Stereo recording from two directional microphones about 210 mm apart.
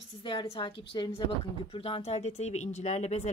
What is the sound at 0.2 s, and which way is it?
A woman's voice, 25° left (ahead or behind).